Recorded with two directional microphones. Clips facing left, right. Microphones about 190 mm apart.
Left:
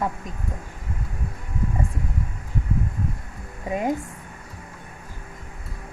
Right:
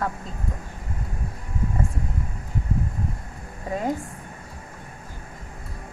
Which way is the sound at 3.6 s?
15° left (ahead or behind).